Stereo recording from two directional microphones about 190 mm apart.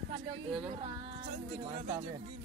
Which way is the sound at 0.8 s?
30° right (ahead or behind).